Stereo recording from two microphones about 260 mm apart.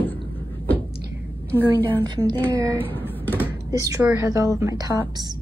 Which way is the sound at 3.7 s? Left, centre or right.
Centre.